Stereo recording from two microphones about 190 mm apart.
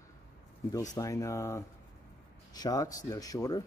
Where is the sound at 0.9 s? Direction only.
15° left (ahead or behind).